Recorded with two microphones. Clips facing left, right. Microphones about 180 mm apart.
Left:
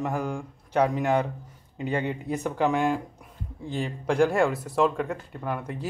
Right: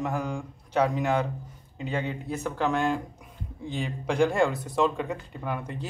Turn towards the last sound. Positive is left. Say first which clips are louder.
# left 1 dB
turn(degrees=5)  # may be behind; listen again after turning